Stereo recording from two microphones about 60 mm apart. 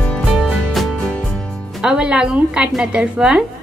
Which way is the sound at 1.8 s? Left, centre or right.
Centre.